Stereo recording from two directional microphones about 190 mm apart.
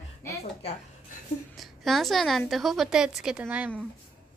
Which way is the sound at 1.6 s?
Centre (ahead or behind).